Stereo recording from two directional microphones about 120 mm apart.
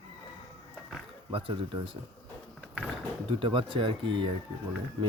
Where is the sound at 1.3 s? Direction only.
45° right (ahead or behind).